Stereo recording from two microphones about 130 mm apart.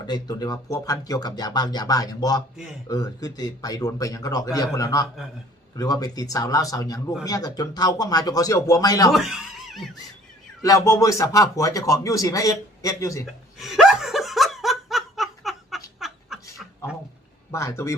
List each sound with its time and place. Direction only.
0.1 s speech: 30° left (ahead or behind)
9.1 s speech: centre (ahead or behind)
10.6 s speech: 25° left (ahead or behind)
13.2 s chuckle: centre (ahead or behind)
16.0 s a sound: centre (ahead or behind)
17.5 s speech: 25° left (ahead or behind)